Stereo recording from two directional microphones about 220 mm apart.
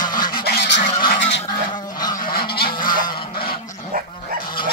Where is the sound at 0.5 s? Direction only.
55° left (ahead or behind).